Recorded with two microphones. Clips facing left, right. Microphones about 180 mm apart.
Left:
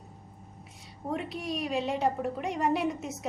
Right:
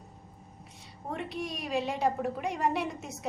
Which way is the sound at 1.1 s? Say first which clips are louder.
Left 2 dB; centre (ahead or behind).